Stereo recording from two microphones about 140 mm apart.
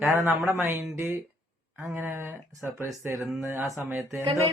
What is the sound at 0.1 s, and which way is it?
A woman's voice, 20° right (ahead or behind).